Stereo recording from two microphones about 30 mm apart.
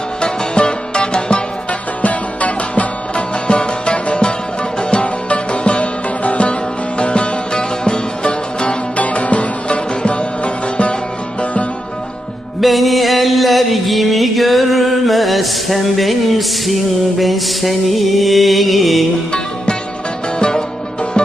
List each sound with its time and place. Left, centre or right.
0.2 s music: left
2.0 s music: left
3.2 s music: left
5.0 s music: left
9.0 s music: left
12.5 s music: centre